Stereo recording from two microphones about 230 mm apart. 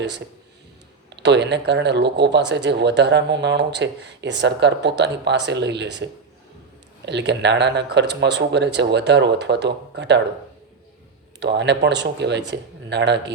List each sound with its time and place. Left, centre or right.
1.1 s speech: right
11.3 s speech: right